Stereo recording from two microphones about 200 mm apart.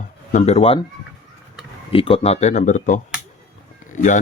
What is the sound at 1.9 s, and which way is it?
Speech, 25° left (ahead or behind).